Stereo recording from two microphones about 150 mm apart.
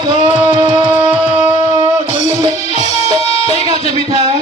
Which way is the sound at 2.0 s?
50° left (ahead or behind).